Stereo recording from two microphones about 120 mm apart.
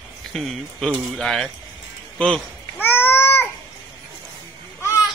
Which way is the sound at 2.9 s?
20° left (ahead or behind).